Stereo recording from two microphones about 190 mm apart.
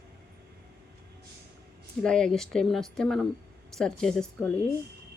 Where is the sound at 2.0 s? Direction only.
5° left (ahead or behind).